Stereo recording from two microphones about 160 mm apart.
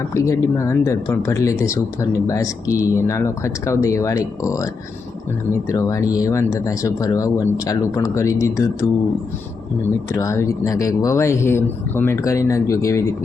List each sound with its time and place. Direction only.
0.1 s speech: 20° left (ahead or behind)
10.1 s speech: 20° left (ahead or behind)